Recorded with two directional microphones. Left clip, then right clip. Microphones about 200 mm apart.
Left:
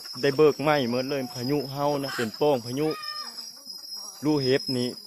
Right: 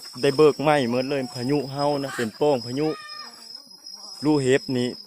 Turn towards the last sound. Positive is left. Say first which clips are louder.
# right 3 dB
turn(degrees=-30)  # may be behind; listen again after turning